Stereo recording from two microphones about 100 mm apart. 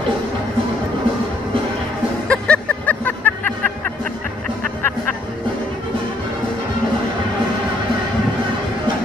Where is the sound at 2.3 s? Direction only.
10° left (ahead or behind).